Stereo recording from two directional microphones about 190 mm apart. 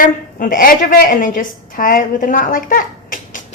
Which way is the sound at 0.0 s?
45° left (ahead or behind).